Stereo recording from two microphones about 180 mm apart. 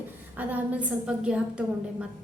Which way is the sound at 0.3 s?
10° right (ahead or behind).